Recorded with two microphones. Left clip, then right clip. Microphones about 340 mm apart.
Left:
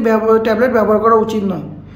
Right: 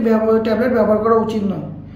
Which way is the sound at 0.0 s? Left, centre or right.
Centre.